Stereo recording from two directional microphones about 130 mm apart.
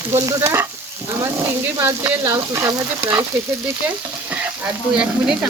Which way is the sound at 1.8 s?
15° right (ahead or behind).